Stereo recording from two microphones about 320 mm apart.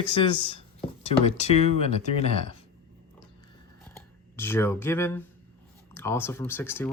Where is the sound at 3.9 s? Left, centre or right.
Centre.